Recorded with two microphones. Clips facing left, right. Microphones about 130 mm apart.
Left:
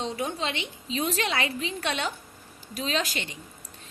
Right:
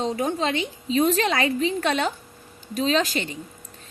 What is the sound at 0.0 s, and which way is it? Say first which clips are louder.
A woman's voice: right 6 dB; 40° right (ahead or behind).